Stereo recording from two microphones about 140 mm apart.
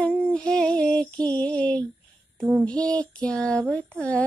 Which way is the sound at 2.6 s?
10° left (ahead or behind).